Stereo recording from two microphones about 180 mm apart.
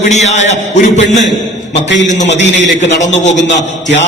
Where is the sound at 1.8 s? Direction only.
85° left.